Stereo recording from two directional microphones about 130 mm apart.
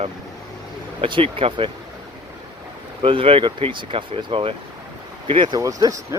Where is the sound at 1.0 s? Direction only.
40° right (ahead or behind).